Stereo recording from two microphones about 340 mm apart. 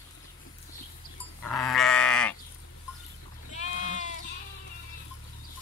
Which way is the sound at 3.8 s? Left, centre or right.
Left.